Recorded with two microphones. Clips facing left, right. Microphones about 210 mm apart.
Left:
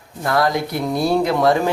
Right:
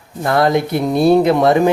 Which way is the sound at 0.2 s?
25° right (ahead or behind).